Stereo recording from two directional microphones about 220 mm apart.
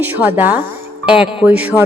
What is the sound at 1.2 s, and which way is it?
Music, 5° right (ahead or behind).